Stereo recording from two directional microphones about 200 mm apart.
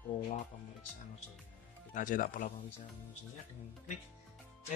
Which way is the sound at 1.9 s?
40° left (ahead or behind).